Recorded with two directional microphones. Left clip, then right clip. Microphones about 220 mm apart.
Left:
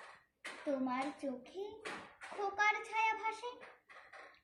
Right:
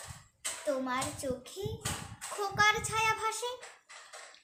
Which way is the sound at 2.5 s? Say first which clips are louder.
Right 7 dB; 30° right (ahead or behind).